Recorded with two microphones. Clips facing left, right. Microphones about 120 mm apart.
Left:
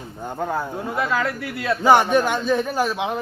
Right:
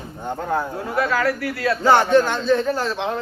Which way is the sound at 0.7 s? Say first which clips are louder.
Right 2 dB; 20° left (ahead or behind).